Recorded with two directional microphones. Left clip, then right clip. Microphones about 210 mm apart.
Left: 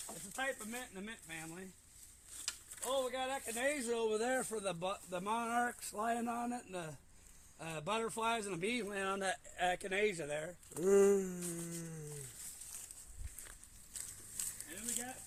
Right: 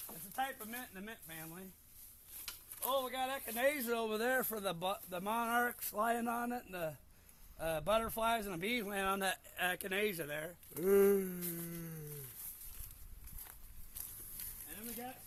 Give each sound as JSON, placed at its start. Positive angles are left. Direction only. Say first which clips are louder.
{"t": 0.3, "sound": "speech", "louder": "even", "side_deg": -30}
{"t": 2.8, "sound": "speech", "louder": "right 1 dB", "side_deg": -40}
{"t": 10.8, "sound": "a sound", "louder": "even", "side_deg": -15}